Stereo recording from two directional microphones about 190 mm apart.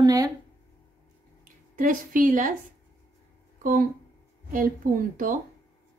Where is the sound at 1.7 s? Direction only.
45° right (ahead or behind).